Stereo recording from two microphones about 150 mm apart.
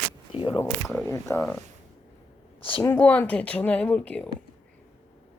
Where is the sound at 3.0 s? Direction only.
10° left (ahead or behind).